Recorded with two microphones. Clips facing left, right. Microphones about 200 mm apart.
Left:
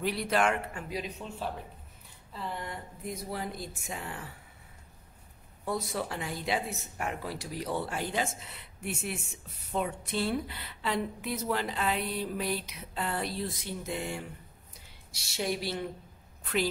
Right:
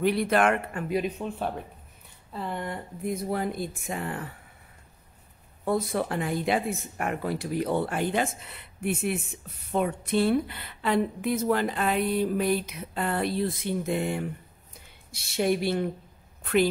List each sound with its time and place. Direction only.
0.0 s a woman's voice: 55° right (ahead or behind)
5.7 s a woman's voice: 55° right (ahead or behind)